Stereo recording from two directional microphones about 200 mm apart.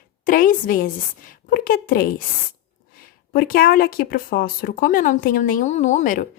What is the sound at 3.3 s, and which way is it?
Speech, 45° left (ahead or behind).